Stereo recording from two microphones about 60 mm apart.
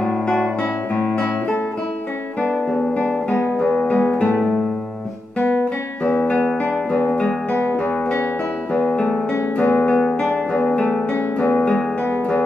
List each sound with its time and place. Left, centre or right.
0.0 s guitar: centre
2.4 s guitar: left
3.6 s music: left
5.4 s music: left
6.4 s music: centre
8.9 s music: left
9.6 s music: left
9.8 s music: left